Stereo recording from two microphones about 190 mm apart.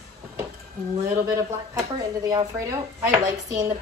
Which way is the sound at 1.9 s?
20° right (ahead or behind).